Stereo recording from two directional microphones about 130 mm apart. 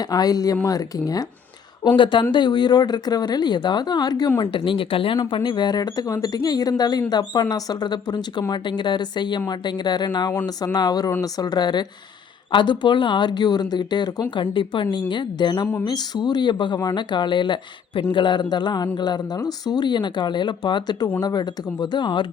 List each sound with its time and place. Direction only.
0.0 s a woman's voice: 30° left (ahead or behind)
2.0 s speech: 40° left (ahead or behind)